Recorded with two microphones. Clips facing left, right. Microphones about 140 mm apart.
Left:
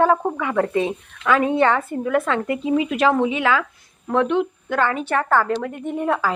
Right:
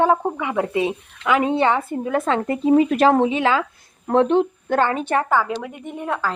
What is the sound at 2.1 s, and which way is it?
Speech, 30° right (ahead or behind).